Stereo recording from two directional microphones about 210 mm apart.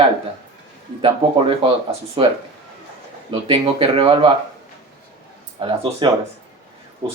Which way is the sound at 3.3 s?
25° right (ahead or behind).